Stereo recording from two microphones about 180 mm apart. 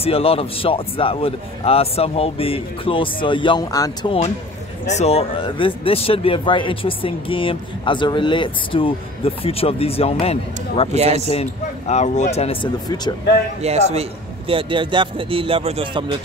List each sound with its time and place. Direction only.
0.0 s a man's voice: 30° left (ahead or behind)
4.8 s speech: 35° left (ahead or behind)
10.9 s a man's voice: 35° right (ahead or behind)
11.9 s a man's voice: 40° left (ahead or behind)
12.8 s speech: 20° left (ahead or behind)
13.6 s a man's voice: 35° right (ahead or behind)